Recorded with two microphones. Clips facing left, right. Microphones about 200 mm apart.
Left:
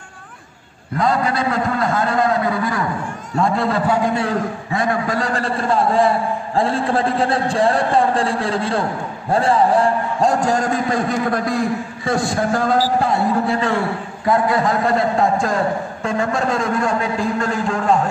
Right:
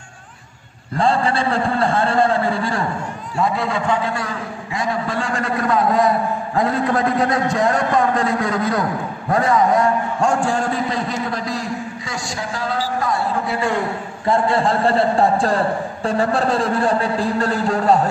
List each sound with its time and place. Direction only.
0.9 s a man's voice: 30° right (ahead or behind)
3.3 s a man's voice: centre (ahead or behind)
4.7 s a man's voice: 50° left (ahead or behind)
13.5 s a man's voice: 15° right (ahead or behind); by 18.0 s 35° right (ahead or behind)